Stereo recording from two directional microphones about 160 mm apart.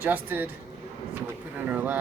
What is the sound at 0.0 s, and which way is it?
Speech, 15° right (ahead or behind).